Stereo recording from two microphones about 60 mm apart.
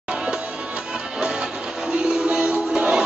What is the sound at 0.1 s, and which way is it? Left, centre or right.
Music, centre.